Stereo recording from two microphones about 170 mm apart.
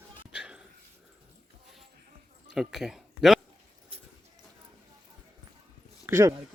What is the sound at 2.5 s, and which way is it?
Speech, centre (ahead or behind).